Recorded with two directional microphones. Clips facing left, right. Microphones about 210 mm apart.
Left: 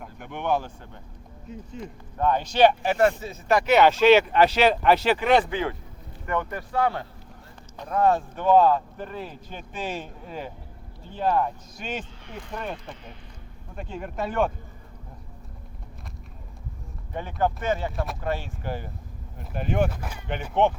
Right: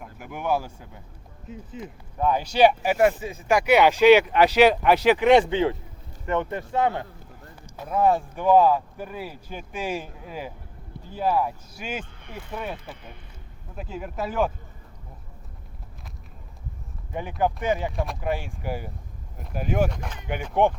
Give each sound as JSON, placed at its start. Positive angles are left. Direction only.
{"t": 0.0, "sound": "speech", "side_deg": -5}
{"t": 7.8, "sound": "speech", "side_deg": -5}
{"t": 17.4, "sound": "speech", "side_deg": -15}
{"t": 17.9, "sound": "speech", "side_deg": 0}
{"t": 18.2, "sound": "speech", "side_deg": -15}
{"t": 19.9, "sound": "speech", "side_deg": 5}
{"t": 20.2, "sound": "speech", "side_deg": -10}